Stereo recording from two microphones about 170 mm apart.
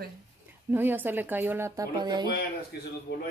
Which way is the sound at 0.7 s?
10° right (ahead or behind).